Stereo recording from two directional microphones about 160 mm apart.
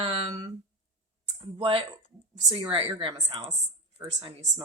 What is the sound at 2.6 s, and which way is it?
Speech, 35° right (ahead or behind).